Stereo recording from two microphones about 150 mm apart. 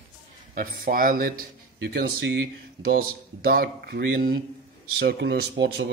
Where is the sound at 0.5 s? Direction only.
70° right (ahead or behind).